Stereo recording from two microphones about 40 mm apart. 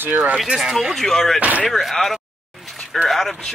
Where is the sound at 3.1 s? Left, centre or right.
Centre.